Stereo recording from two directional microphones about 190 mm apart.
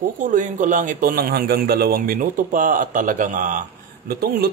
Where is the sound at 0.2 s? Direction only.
40° right (ahead or behind).